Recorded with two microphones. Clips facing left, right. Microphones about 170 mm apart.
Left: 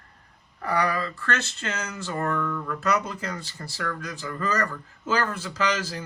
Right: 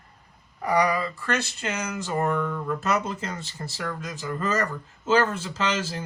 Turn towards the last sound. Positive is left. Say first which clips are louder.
# even
turn(degrees=-25)  # may be behind; listen again after turning